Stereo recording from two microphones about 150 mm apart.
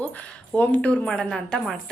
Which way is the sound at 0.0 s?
10° left (ahead or behind).